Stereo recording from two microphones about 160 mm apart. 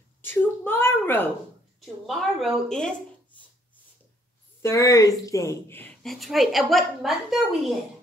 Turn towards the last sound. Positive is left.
turn(degrees=0)  # may be behind; listen again after turning